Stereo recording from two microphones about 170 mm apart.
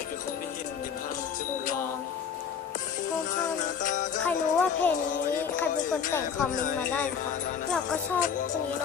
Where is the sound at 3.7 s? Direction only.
50° left (ahead or behind).